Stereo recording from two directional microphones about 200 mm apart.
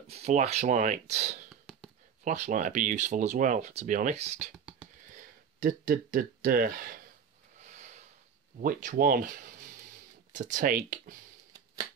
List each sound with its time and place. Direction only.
0.1 s speech: 30° right (ahead or behind)
1.5 s a sound: centre (ahead or behind)
2.2 s speech: 40° right (ahead or behind)
4.8 s computer keyboard: 5° right (ahead or behind)
5.6 s speech: 45° right (ahead or behind)
7.6 s a sound: 35° right (ahead or behind)
8.5 s speech: 40° right (ahead or behind)